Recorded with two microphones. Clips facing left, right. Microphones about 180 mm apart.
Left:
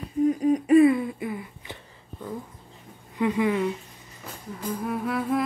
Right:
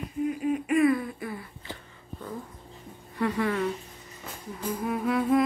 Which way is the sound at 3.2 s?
15° left (ahead or behind).